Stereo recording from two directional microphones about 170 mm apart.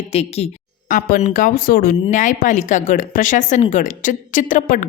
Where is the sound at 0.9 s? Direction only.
55° left (ahead or behind).